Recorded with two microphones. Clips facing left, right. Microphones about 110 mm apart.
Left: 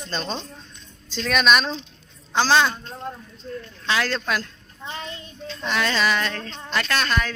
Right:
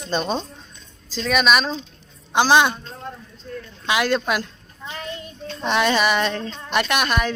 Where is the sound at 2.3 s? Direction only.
15° right (ahead or behind).